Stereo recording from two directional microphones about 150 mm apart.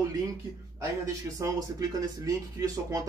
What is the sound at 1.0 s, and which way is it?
Speech, 20° right (ahead or behind).